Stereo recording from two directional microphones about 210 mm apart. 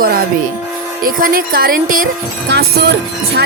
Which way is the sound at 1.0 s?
45° right (ahead or behind).